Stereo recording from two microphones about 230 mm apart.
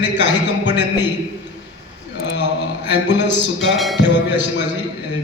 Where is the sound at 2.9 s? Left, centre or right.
Left.